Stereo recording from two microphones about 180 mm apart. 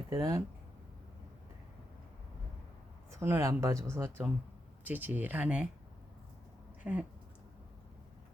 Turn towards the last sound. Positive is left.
turn(degrees=-10)  # may be behind; listen again after turning